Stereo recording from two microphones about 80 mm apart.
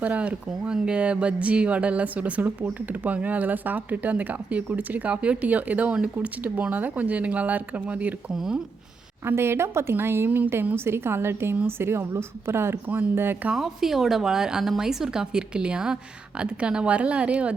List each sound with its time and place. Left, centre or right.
0.0 s speech: centre
8.3 s speech: centre
9.2 s a woman's voice: right
13.5 s speech: centre